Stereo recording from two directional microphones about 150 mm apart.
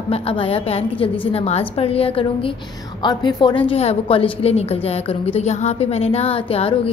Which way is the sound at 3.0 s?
30° left (ahead or behind).